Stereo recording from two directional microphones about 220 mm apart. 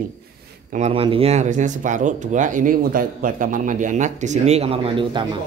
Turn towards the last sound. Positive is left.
turn(degrees=-20)  # may be behind; listen again after turning